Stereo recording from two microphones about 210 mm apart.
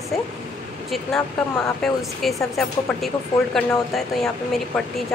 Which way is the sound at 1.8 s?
Centre (ahead or behind).